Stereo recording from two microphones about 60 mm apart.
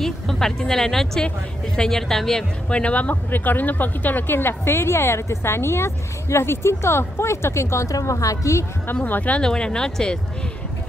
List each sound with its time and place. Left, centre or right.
0.0 s a woman's voice: centre
2.7 s speech: left
8.0 s a woman's voice: left
9.0 s speech: left
9.4 s speech: centre